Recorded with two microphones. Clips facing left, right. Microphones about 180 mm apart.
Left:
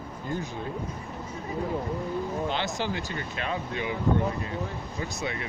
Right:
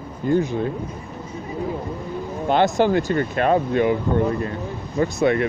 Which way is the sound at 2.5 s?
55° right (ahead or behind).